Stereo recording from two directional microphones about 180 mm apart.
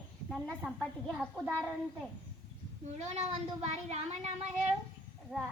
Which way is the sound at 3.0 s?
35° right (ahead or behind).